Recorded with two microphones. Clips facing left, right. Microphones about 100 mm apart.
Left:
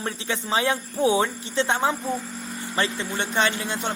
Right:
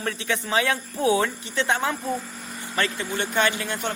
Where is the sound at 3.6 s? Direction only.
20° left (ahead or behind).